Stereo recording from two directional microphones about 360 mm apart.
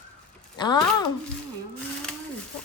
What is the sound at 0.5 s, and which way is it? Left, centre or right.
Speech, centre.